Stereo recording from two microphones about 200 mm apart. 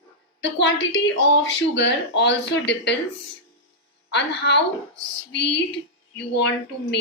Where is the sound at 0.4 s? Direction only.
65° left (ahead or behind).